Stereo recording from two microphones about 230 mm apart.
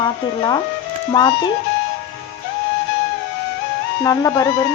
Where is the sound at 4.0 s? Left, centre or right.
Centre.